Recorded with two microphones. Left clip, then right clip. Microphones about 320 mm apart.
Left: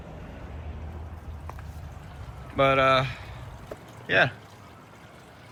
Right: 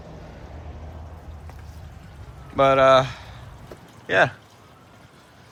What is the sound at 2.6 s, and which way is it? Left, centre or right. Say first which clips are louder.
Speech: right 6 dB; centre.